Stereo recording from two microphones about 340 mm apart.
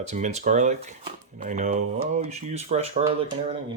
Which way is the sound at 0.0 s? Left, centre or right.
Centre.